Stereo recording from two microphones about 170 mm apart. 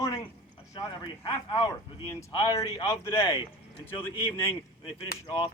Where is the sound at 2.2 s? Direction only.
20° left (ahead or behind).